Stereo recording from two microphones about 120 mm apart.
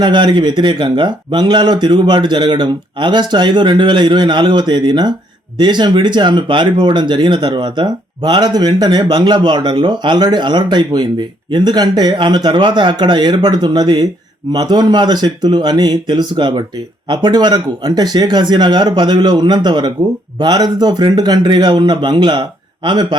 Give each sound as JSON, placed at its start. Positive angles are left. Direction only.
{"t": 0.0, "sound": "speech", "side_deg": -40}